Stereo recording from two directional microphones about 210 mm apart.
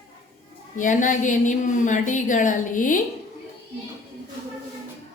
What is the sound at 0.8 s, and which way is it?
A woman's voice, 40° left (ahead or behind).